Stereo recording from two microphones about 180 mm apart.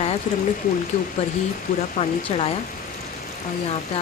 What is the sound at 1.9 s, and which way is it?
Speech, 35° left (ahead or behind).